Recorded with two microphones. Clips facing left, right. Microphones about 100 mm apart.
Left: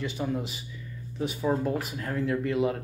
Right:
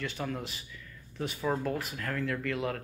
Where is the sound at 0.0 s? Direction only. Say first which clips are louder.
Left 5 dB; 15° left (ahead or behind).